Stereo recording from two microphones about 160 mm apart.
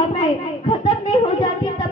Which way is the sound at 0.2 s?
30° left (ahead or behind).